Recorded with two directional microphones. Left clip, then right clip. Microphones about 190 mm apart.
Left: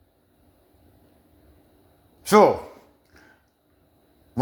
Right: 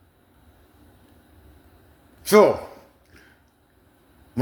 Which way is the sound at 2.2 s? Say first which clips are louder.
Right 1 dB; 15° left (ahead or behind).